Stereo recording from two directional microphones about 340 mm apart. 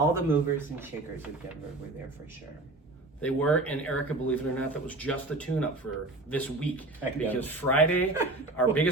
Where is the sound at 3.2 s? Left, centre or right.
Centre.